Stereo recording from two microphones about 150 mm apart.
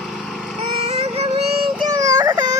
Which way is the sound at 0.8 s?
45° right (ahead or behind).